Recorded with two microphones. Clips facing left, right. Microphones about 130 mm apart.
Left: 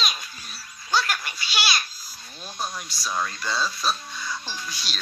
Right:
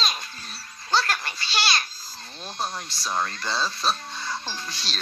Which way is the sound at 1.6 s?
10° left (ahead or behind).